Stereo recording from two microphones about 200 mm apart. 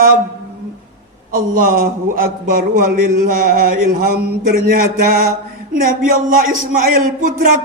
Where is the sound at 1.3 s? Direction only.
40° right (ahead or behind).